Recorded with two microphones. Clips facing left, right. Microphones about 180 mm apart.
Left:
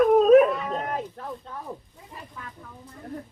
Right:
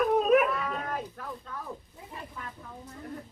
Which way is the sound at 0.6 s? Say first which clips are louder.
Left 4 dB; 20° left (ahead or behind).